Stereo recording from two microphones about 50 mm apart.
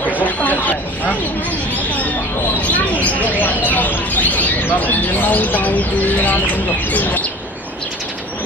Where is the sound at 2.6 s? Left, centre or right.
Left.